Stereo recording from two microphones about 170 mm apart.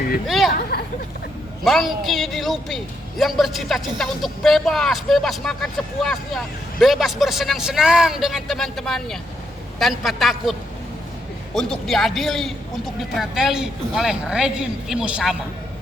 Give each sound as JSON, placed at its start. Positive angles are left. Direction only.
{"t": 0.3, "sound": "a woman's voice", "side_deg": 0}
{"t": 0.7, "sound": "speech", "side_deg": 70}
{"t": 1.6, "sound": "a woman's voice", "side_deg": 0}
{"t": 11.5, "sound": "a woman's voice", "side_deg": 0}